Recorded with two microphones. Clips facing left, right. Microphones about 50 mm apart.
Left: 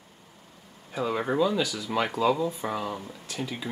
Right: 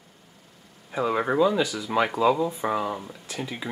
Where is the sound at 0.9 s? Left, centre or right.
Centre.